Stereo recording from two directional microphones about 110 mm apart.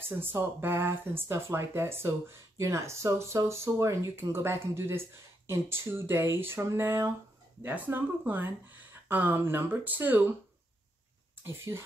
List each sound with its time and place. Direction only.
0.2 s speech: 20° right (ahead or behind)
11.4 s speech: 25° right (ahead or behind)